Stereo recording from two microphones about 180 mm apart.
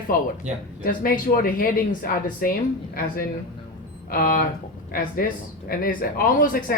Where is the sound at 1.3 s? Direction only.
50° left (ahead or behind).